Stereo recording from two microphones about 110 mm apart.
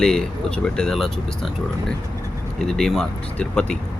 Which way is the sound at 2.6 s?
5° left (ahead or behind).